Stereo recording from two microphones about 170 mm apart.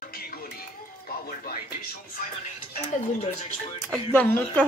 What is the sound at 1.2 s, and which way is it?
Music, 60° left (ahead or behind).